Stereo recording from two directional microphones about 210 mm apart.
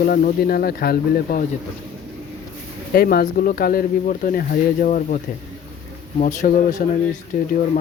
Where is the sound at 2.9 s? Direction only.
45° left (ahead or behind).